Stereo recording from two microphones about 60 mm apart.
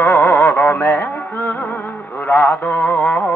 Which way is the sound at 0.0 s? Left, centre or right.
Left.